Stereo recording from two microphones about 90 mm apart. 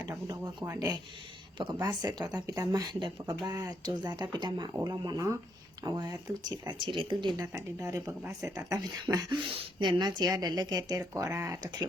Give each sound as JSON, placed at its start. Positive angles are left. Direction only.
{"t": 0.3, "sound": "speech", "side_deg": -40}
{"t": 1.5, "sound": "speech", "side_deg": -55}
{"t": 3.0, "sound": "speech", "side_deg": -65}
{"t": 3.5, "sound": "speech", "side_deg": -45}
{"t": 4.9, "sound": "speech", "side_deg": -40}
{"t": 6.7, "sound": "speech", "side_deg": -65}
{"t": 7.3, "sound": "speech", "side_deg": -40}
{"t": 9.8, "sound": "speech", "side_deg": -55}
{"t": 11.3, "sound": "speech", "side_deg": -35}